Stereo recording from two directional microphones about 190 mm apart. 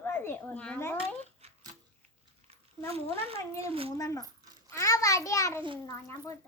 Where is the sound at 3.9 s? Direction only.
15° left (ahead or behind).